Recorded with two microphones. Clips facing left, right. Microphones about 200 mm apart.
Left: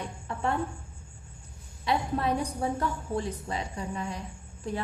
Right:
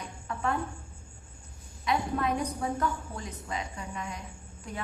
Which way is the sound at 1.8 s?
30° left (ahead or behind).